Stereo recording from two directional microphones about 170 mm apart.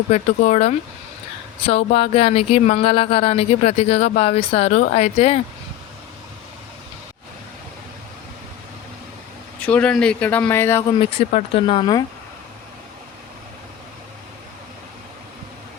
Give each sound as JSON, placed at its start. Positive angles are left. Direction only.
{"t": 0.1, "sound": "speech", "side_deg": 40}
{"t": 9.6, "sound": "speech", "side_deg": 5}
{"t": 11.0, "sound": "speech", "side_deg": 40}